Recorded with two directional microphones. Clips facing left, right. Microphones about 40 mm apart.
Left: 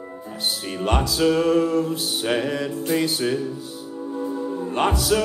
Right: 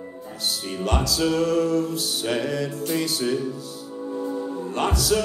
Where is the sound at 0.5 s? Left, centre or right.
Left.